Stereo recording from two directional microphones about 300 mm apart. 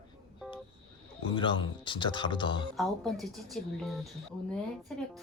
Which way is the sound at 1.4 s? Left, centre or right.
Centre.